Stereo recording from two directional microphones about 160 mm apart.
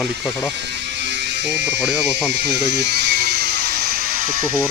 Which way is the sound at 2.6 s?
90° right.